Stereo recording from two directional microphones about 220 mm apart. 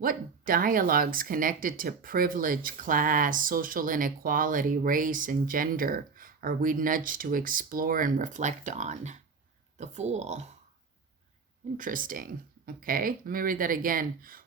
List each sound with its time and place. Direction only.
0.0 s speech: 40° right (ahead or behind)
11.8 s speech: 40° right (ahead or behind)